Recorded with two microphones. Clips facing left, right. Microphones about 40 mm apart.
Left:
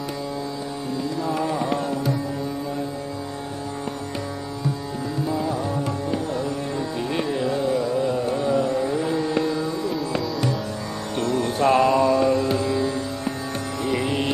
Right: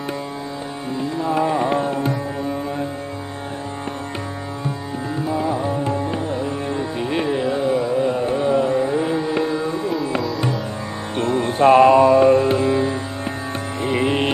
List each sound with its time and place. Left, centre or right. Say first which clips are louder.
0.9 s music: right 5 dB; right
5.0 s music: right 3 dB; right
11.1 s music: right 4 dB; right